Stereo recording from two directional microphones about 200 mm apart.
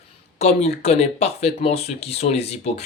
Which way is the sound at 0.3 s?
35° left (ahead or behind).